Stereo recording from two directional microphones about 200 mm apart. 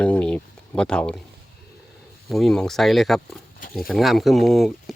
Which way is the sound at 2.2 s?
Centre (ahead or behind).